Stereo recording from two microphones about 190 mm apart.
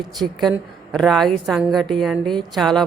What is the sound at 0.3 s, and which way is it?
A woman's voice, centre (ahead or behind).